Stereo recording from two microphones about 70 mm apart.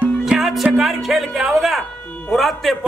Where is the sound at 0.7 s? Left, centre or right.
Centre.